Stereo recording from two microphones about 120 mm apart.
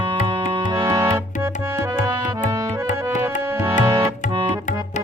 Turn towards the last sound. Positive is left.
turn(degrees=-25)  # may be behind; listen again after turning